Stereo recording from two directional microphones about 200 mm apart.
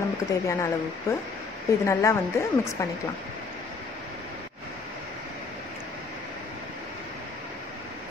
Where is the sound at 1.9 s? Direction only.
15° left (ahead or behind).